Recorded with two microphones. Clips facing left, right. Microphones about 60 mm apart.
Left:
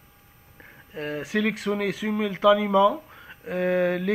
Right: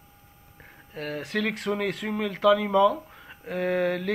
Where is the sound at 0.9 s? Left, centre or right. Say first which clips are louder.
Left 2 dB; centre.